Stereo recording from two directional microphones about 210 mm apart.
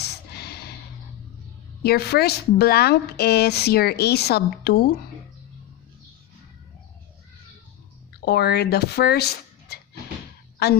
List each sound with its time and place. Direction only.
0.0 s a sound: 50° left (ahead or behind)
1.8 s speech: 50° left (ahead or behind)
8.2 s a woman's voice: 50° left (ahead or behind)